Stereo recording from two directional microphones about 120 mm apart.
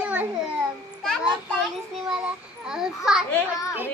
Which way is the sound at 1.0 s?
5° left (ahead or behind).